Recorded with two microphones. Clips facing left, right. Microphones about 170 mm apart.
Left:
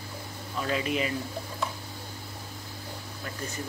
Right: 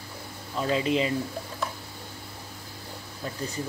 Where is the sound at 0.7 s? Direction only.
25° right (ahead or behind).